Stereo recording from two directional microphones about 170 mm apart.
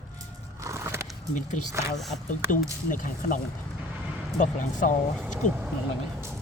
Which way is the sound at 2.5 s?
50° left (ahead or behind).